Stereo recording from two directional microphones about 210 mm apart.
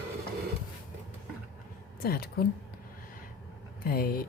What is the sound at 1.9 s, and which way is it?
Speech, 45° left (ahead or behind).